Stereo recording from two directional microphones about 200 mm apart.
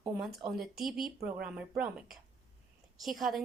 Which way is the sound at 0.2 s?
Centre (ahead or behind).